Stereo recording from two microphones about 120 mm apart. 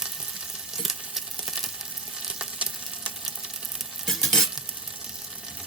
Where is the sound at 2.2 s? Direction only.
10° right (ahead or behind).